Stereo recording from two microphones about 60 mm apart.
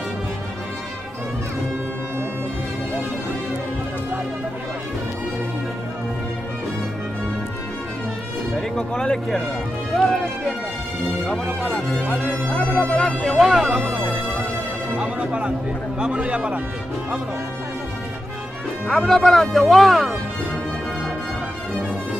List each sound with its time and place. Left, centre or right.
8.5 s speech: centre
9.9 s music: centre
11.2 s speech: centre; by 13.0 s left
13.4 s speech: centre
13.7 s speech: right
15.0 s music: centre
16.0 s speech: centre
18.9 s speech: centre